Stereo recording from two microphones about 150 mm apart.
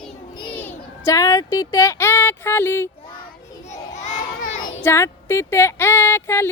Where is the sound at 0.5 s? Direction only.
10° left (ahead or behind).